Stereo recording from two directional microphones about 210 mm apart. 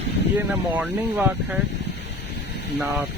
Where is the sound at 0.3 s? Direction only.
5° right (ahead or behind).